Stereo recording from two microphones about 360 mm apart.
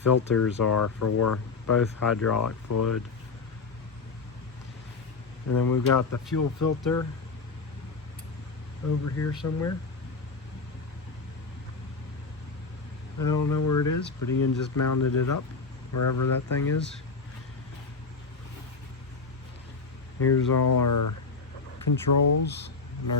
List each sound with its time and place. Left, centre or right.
0.0 s speech: left
5.6 s speech: left
9.4 s speech: left
13.1 s speech: left
20.1 s speech: left
20.7 s speech: left